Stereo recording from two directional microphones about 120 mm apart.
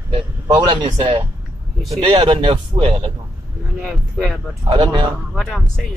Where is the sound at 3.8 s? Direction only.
Centre (ahead or behind).